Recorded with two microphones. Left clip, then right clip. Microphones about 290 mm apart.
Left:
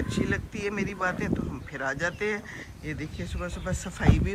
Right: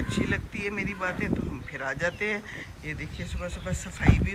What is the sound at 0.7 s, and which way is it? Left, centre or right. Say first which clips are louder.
Speech: left 2 dB; centre.